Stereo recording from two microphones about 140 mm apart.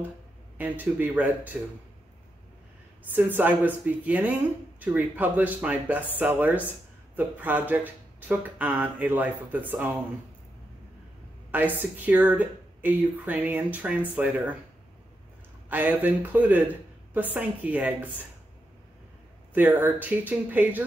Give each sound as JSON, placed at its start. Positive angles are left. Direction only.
{"t": 0.6, "sound": "speech", "side_deg": -15}
{"t": 3.1, "sound": "speech", "side_deg": -10}
{"t": 11.5, "sound": "speech", "side_deg": -15}
{"t": 15.7, "sound": "speech", "side_deg": -15}
{"t": 19.5, "sound": "speech", "side_deg": -15}